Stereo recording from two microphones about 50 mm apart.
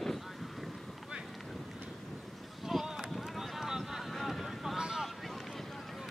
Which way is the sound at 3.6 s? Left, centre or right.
Centre.